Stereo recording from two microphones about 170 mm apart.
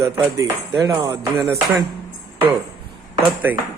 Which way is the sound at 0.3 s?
20° right (ahead or behind).